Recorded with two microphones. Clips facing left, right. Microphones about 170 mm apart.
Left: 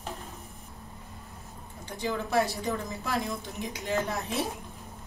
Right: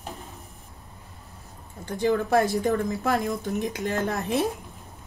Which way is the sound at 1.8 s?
55° right (ahead or behind).